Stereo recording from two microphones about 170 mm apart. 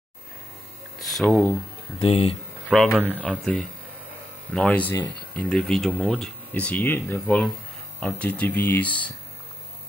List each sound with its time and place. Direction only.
0.9 s hum: centre (ahead or behind)
2.0 s speech: 35° left (ahead or behind)
2.7 s speech: centre (ahead or behind)